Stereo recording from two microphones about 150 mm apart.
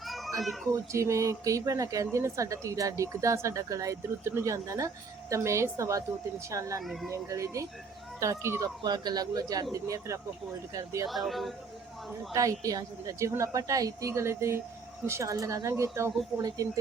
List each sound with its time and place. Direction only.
0.0 s children playing: centre (ahead or behind)
0.7 s speech: 20° right (ahead or behind)
6.8 s speech: centre (ahead or behind)
7.1 s speech: 20° right (ahead or behind)
8.8 s speech: 30° right (ahead or behind)
11.0 s speech: centre (ahead or behind)
12.3 s speech: 20° right (ahead or behind)